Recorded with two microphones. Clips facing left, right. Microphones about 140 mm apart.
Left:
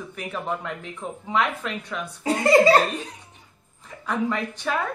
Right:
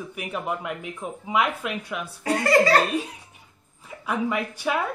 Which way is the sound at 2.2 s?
20° left (ahead or behind).